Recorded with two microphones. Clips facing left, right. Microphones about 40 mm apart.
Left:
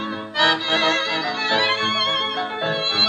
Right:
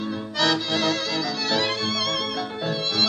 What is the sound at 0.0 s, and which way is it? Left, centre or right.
Music, left.